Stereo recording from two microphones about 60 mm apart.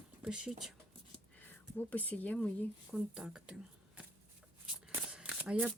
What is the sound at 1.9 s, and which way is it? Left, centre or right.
Speech, left.